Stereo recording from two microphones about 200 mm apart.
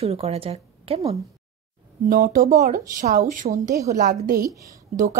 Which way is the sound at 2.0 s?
50° right (ahead or behind).